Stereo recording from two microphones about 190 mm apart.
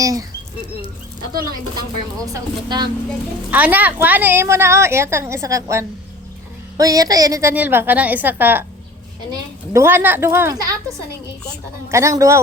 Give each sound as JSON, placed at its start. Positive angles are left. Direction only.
{"t": 0.0, "sound": "speech", "side_deg": -20}
{"t": 2.2, "sound": "speech", "side_deg": -20}
{"t": 3.5, "sound": "a woman's voice", "side_deg": -10}
{"t": 11.9, "sound": "a woman's voice", "side_deg": -15}